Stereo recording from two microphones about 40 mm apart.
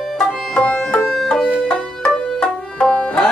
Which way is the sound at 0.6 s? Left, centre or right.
Left.